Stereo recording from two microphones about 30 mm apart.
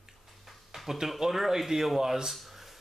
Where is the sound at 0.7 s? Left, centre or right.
Centre.